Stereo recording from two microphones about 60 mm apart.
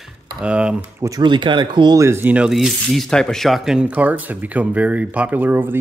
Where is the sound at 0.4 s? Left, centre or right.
Centre.